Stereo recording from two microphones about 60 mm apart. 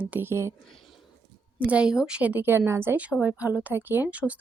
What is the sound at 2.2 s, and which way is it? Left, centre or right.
Speech, right.